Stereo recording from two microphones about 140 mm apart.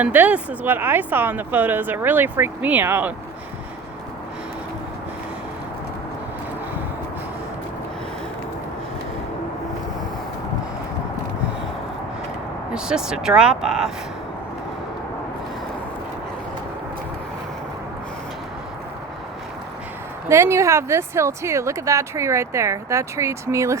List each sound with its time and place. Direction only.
0.0 s speech: 10° right (ahead or behind)
12.7 s speech: 5° right (ahead or behind)
20.2 s speech: 20° right (ahead or behind)